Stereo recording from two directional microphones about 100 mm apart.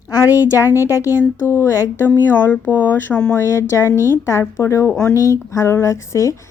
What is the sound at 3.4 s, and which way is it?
Speech, 25° left (ahead or behind).